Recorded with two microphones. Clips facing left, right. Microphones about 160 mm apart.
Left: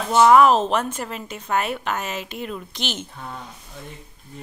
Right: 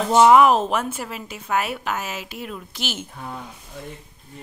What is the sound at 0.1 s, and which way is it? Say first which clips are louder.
A woman's voice: even; 15° right (ahead or behind).